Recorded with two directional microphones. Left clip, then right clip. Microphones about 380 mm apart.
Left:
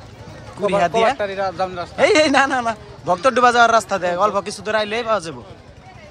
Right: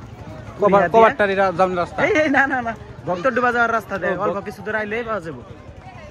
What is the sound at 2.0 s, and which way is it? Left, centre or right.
A man's voice, centre.